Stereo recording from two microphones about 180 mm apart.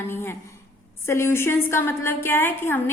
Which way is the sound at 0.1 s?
15° left (ahead or behind).